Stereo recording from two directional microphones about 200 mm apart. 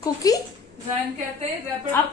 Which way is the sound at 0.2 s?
20° left (ahead or behind).